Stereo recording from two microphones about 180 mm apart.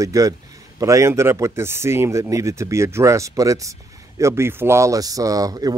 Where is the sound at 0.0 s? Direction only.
20° right (ahead or behind).